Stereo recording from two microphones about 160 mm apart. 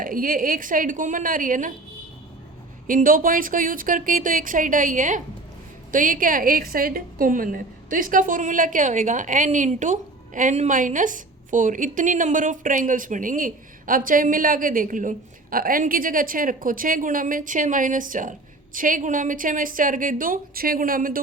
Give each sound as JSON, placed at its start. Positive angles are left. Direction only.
{"t": 0.0, "sound": "a woman's voice", "side_deg": -60}
{"t": 2.8, "sound": "a woman's voice", "side_deg": -60}